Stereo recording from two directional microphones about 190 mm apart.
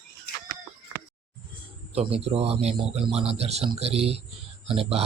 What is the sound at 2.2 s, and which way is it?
Speech, 30° right (ahead or behind).